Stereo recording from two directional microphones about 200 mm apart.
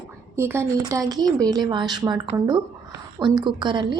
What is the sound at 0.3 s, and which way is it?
A woman's voice, 10° right (ahead or behind).